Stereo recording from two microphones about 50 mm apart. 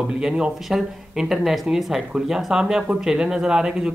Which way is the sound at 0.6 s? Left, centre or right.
Centre.